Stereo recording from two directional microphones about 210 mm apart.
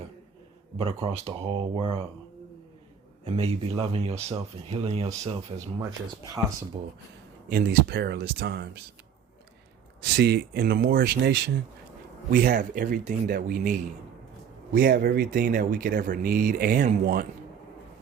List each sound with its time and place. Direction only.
1.0 s speech: 25° right (ahead or behind)
3.2 s speech: 25° right (ahead or behind)
5.8 s speech: 15° right (ahead or behind)
7.5 s speech: 45° right (ahead or behind)
10.0 s speech: 50° right (ahead or behind)